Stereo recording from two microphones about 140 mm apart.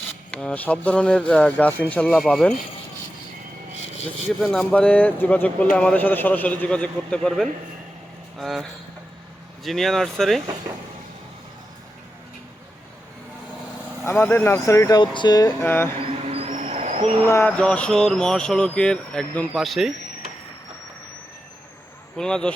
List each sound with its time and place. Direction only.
0.3 s speech: 10° left (ahead or behind)
4.4 s speech: 5° left (ahead or behind)
9.6 s speech: centre (ahead or behind)
14.0 s speech: 15° left (ahead or behind)
15.6 s speech: 15° left (ahead or behind)
16.0 s vehicle: 45° right (ahead or behind)
16.5 s vehicle: 60° right (ahead or behind)
17.2 s speech: 15° left (ahead or behind)
22.2 s speech: 5° left (ahead or behind)